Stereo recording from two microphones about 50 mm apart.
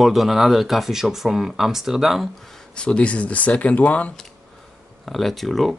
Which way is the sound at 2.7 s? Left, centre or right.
Left.